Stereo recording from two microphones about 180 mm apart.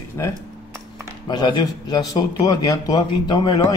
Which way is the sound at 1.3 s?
25° left (ahead or behind).